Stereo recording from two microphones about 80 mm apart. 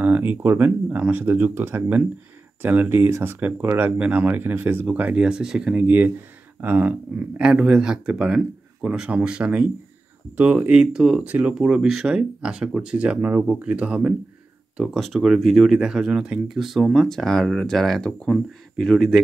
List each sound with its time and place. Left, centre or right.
0.0 s speech: right
10.7 s speech: centre
11.2 s speech: centre
15.1 s speech: centre